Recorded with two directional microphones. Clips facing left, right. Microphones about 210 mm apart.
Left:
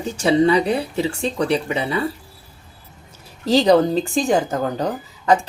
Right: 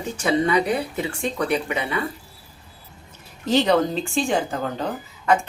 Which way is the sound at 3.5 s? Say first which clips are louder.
Left 4 dB; 35° left (ahead or behind).